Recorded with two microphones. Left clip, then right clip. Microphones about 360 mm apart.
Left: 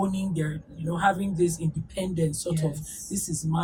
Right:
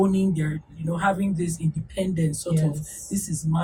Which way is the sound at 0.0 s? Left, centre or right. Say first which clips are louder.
Right 6 dB; centre.